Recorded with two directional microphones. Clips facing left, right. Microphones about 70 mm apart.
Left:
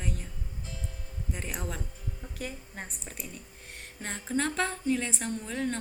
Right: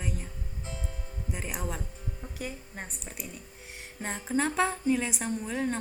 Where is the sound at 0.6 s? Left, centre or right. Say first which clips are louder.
Right 3 dB; right.